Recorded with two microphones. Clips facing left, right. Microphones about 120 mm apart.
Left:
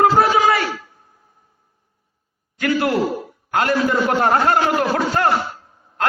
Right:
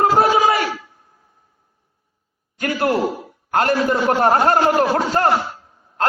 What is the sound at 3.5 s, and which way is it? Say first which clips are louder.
A man's voice: right 1 dB; 45° right (ahead or behind).